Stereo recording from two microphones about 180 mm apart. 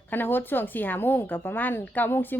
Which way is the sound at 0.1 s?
10° left (ahead or behind).